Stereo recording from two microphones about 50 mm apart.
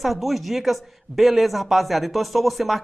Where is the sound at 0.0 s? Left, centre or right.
Centre.